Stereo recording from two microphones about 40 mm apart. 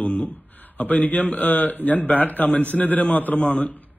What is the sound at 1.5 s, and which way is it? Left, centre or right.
A man's voice, left.